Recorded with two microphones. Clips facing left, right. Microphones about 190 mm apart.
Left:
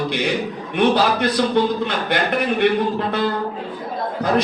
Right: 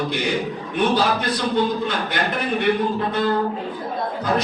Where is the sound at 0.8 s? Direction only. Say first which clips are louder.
Left 3 dB; 60° left (ahead or behind).